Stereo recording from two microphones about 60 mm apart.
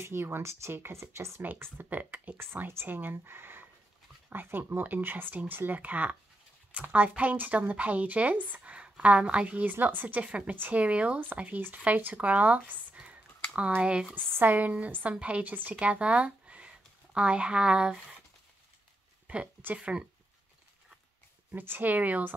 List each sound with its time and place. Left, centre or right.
0.0 s speech: right
1.4 s a woman's voice: right
2.3 s a woman's voice: right
10.2 s a woman's voice: centre
12.9 s a sound: right
13.6 s speech: right
14.1 s a woman's voice: right; by 18.0 s centre
19.2 s a sound: centre
19.6 s a woman's voice: right
21.5 s speech: right